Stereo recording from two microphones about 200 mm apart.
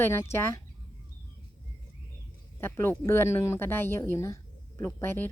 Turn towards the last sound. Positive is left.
turn(degrees=10)  # may be behind; listen again after turning